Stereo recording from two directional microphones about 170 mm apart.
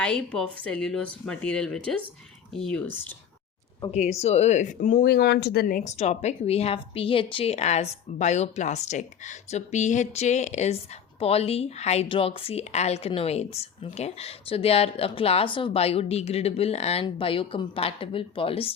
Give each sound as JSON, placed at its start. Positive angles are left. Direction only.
{"t": 0.0, "sound": "speech", "side_deg": 5}
{"t": 3.9, "sound": "a woman's voice", "side_deg": 40}